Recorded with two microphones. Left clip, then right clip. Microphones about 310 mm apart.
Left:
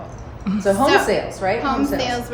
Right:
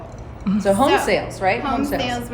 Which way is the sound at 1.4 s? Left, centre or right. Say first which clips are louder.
Right 2 dB; right.